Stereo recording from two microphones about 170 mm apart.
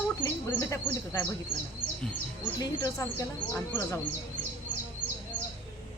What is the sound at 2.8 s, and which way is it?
Speech, 15° left (ahead or behind).